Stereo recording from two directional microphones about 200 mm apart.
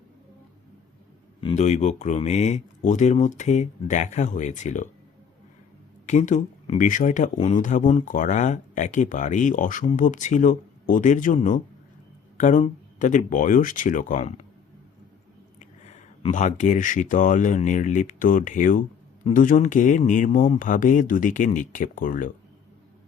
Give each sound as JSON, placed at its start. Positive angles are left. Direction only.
{"t": 1.4, "sound": "speech", "side_deg": 30}
{"t": 6.1, "sound": "speech", "side_deg": 35}
{"t": 15.5, "sound": "speech", "side_deg": 35}